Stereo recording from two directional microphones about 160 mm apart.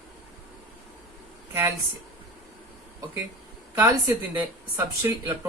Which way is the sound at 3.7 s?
15° right (ahead or behind).